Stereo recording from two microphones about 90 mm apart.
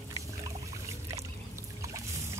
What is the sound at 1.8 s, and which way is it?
Boat, 35° right (ahead or behind).